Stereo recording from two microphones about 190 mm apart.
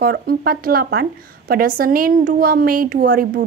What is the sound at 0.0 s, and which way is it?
A woman's voice, 50° right (ahead or behind).